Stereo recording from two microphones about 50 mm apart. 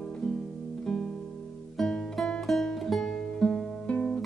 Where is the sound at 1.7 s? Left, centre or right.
Centre.